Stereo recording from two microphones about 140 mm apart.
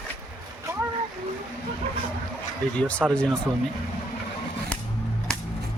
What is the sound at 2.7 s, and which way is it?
Speech, 10° left (ahead or behind).